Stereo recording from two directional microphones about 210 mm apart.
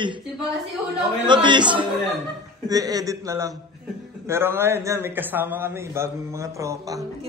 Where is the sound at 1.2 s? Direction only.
20° right (ahead or behind).